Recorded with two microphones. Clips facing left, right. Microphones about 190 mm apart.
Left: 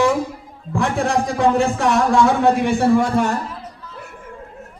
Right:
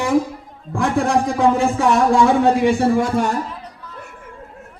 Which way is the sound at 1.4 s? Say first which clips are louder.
Left 1 dB; 70° left (ahead or behind).